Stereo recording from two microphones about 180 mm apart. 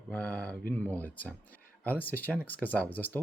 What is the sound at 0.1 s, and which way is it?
Speech, 5° left (ahead or behind).